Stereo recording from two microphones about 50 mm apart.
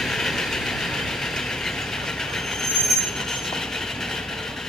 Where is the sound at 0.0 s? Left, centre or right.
Centre.